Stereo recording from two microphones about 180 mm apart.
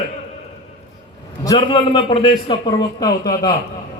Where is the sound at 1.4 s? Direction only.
25° left (ahead or behind).